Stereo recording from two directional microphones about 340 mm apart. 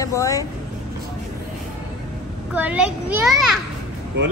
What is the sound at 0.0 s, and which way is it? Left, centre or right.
Speech, centre.